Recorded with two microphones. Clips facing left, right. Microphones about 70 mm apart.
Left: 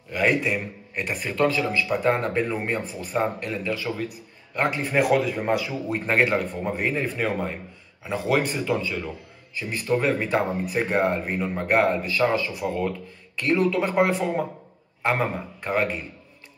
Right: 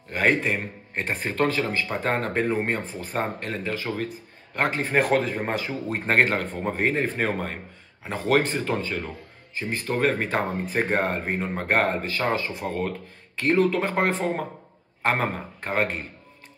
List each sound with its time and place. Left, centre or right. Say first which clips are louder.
0.1 s a man's voice: even; right